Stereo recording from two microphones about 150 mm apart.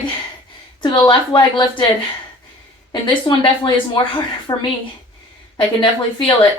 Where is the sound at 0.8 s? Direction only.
30° left (ahead or behind).